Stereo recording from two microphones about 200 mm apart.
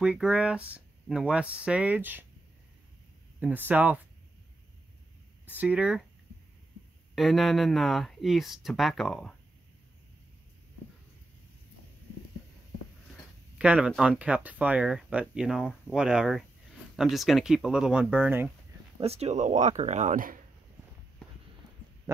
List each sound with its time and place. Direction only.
0.0 s speech: 5° right (ahead or behind)
3.3 s speech: 10° right (ahead or behind)
5.6 s speech: 5° right (ahead or behind)
7.2 s speech: centre (ahead or behind)
13.6 s speech: 5° right (ahead or behind)
18.9 s speech: 30° right (ahead or behind)